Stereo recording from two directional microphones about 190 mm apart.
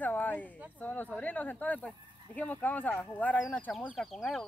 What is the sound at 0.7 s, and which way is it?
Speech, 10° left (ahead or behind).